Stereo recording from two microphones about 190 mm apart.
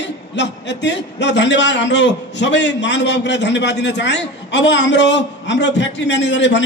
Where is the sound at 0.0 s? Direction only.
65° left (ahead or behind).